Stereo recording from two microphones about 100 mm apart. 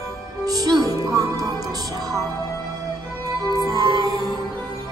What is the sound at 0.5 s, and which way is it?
Music, 40° right (ahead or behind).